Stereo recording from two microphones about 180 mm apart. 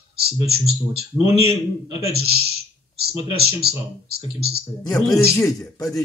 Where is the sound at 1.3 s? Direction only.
30° left (ahead or behind).